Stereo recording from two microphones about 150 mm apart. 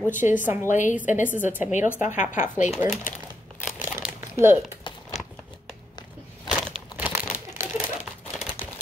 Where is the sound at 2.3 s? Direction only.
60° left (ahead or behind).